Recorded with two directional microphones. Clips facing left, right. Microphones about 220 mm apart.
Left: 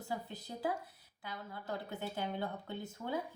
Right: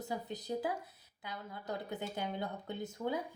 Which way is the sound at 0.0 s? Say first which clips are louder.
Right 2 dB; 20° right (ahead or behind).